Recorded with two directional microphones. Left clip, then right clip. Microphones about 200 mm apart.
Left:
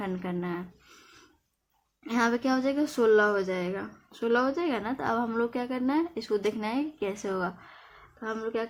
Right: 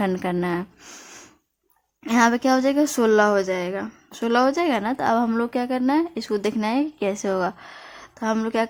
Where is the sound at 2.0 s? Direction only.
35° right (ahead or behind).